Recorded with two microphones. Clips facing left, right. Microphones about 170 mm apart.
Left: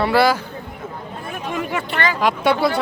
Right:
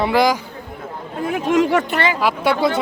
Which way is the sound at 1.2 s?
90° right.